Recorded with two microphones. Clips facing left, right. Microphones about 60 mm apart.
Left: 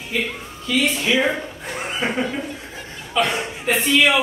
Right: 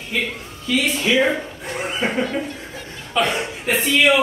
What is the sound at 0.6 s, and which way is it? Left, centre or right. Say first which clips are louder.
A man's voice: even; centre.